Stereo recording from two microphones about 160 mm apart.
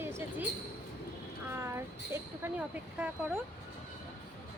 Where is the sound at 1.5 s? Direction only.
15° right (ahead or behind).